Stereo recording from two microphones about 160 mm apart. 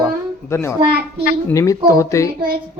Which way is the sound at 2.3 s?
75° right (ahead or behind).